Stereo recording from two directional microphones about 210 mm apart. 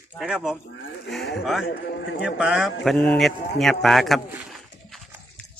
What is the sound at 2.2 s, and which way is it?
Speech, 5° right (ahead or behind).